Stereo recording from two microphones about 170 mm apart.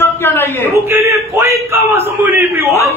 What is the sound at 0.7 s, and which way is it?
A man's voice, 15° right (ahead or behind).